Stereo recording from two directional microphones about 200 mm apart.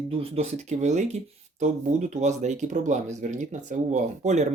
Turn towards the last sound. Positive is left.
turn(degrees=-35)  # may be behind; listen again after turning